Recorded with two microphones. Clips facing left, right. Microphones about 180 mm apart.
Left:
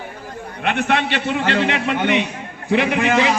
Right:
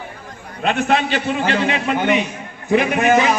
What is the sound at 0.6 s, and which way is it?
A man's voice, 65° left (ahead or behind).